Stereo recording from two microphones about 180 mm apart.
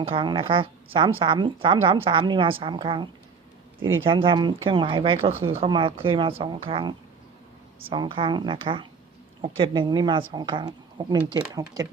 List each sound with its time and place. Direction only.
0.0 s a woman's voice: 30° right (ahead or behind)
3.8 s speech: 90° right
4.1 s a woman's voice: 30° right (ahead or behind)